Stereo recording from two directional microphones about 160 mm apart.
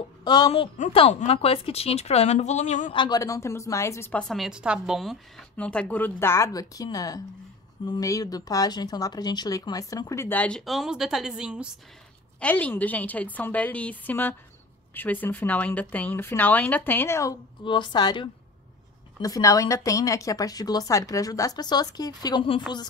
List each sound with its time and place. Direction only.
0.2 s a woman's voice: 25° left (ahead or behind); by 2.9 s 50° left (ahead or behind)
2.9 s speech: 25° left (ahead or behind); by 5.1 s 5° right (ahead or behind)
5.6 s speech: 5° left (ahead or behind)
12.4 s speech: 10° left (ahead or behind); by 22.6 s 30° left (ahead or behind)